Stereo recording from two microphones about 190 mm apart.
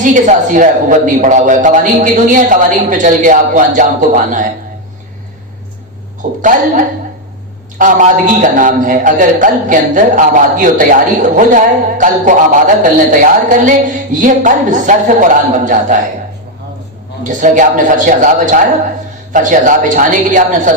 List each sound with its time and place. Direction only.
0.0 s a man's voice: 45° right (ahead or behind)
6.4 s a man's voice: 45° right (ahead or behind)
17.2 s a man's voice: 45° right (ahead or behind)